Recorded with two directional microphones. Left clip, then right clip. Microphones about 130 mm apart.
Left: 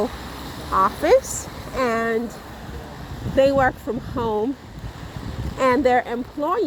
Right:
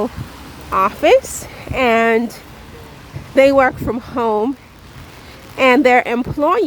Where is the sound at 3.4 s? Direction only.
35° right (ahead or behind).